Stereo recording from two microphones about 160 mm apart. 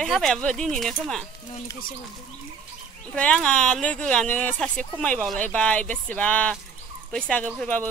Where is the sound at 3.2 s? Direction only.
5° left (ahead or behind).